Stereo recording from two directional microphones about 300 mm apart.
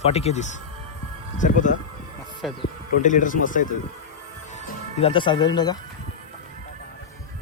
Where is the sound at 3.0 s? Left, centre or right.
Left.